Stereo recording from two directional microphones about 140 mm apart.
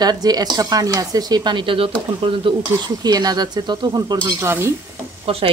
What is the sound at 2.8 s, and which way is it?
Speech, 30° right (ahead or behind).